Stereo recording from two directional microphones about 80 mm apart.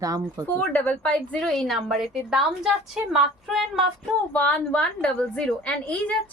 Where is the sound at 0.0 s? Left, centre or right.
Right.